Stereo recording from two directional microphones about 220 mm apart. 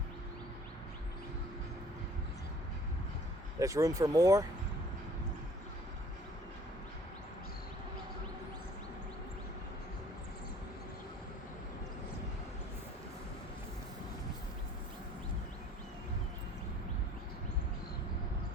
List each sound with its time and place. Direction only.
3.6 s speech: 15° right (ahead or behind)